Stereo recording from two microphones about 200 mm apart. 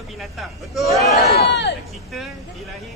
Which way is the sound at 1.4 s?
60° left (ahead or behind).